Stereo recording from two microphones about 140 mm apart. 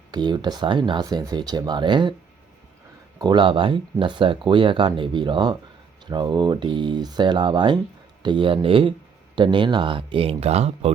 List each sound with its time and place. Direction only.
0.1 s speech: 30° right (ahead or behind)
3.2 s speech: 35° right (ahead or behind)